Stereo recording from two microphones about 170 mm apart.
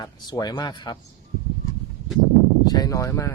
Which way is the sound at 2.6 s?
25° left (ahead or behind).